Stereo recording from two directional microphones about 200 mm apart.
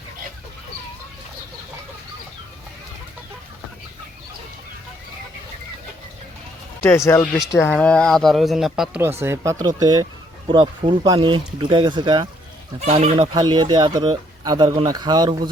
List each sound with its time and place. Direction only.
6.9 s speech: 15° left (ahead or behind); by 15.4 s 20° right (ahead or behind)